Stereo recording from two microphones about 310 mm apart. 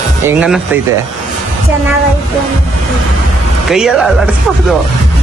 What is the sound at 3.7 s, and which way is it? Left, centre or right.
Speech, centre.